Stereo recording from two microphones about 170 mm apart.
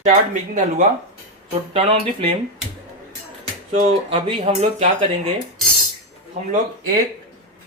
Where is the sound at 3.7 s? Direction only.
40° right (ahead or behind).